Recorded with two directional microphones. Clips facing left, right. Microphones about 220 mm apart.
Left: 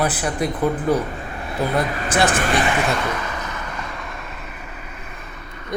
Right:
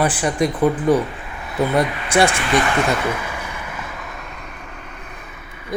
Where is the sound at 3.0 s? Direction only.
10° right (ahead or behind).